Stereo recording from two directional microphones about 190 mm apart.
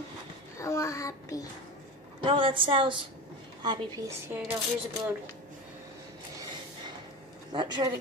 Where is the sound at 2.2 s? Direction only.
25° right (ahead or behind).